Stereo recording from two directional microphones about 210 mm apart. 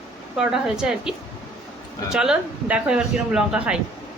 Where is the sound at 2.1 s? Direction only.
5° right (ahead or behind).